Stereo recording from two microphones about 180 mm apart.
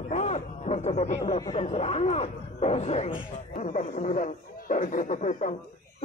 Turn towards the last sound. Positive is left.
turn(degrees=40)  # may be behind; listen again after turning